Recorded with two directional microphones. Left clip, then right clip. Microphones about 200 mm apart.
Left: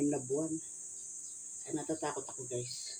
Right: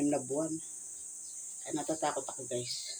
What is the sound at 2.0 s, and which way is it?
Speech, 10° left (ahead or behind).